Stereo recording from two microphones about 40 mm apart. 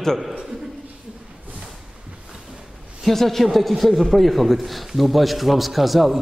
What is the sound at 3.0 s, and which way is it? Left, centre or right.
A man's voice, centre.